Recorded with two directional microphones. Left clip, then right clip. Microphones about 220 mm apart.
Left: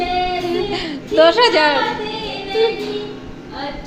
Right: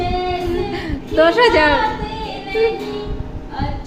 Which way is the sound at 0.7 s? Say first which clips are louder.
Left 2 dB; 15° right (ahead or behind).